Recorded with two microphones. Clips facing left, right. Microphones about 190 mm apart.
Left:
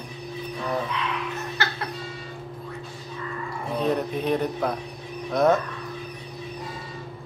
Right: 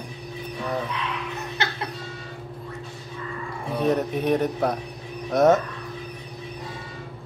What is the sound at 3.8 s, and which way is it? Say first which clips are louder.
Speech: right 3 dB; 45° right (ahead or behind).